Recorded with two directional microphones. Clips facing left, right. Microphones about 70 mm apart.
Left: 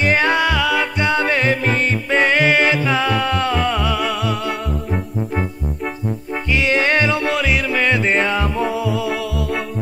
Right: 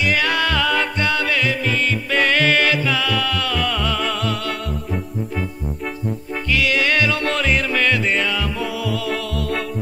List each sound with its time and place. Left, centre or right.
0.0 s music: left
0.5 s music: centre
1.0 s music: left
2.1 s music: left
6.5 s music: left
7.2 s music: centre
7.8 s music: left
8.1 s music: left
8.9 s music: centre